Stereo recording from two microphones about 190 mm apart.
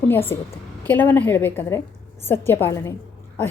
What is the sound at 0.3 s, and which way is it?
A woman's voice, 15° left (ahead or behind).